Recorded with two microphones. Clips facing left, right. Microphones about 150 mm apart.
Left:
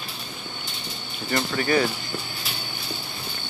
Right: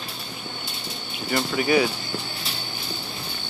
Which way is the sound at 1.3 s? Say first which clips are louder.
Right 1 dB; 5° right (ahead or behind).